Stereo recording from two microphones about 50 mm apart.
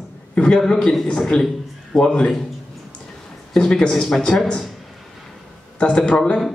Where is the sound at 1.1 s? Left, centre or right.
Centre.